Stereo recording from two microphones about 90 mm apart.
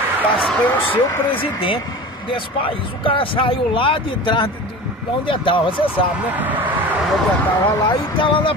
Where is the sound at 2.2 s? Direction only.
75° left (ahead or behind).